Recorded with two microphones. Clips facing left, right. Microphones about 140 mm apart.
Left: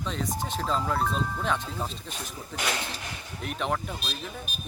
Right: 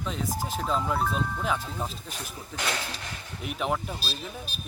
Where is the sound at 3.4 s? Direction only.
5° right (ahead or behind).